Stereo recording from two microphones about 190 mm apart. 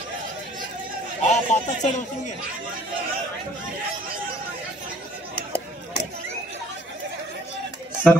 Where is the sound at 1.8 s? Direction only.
40° left (ahead or behind).